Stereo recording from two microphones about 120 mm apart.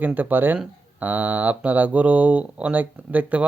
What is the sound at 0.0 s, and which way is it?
Speech, 15° right (ahead or behind).